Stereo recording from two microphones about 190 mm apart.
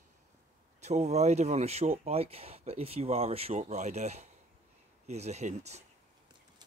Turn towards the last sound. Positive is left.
turn(degrees=-35)  # may be behind; listen again after turning